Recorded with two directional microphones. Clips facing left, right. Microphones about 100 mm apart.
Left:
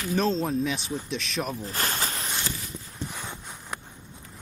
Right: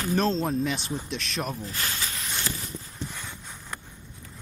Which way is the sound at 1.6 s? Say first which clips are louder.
Left 3 dB; 40° left (ahead or behind).